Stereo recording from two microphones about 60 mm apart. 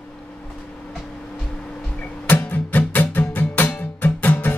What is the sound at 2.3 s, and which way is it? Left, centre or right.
Music, left.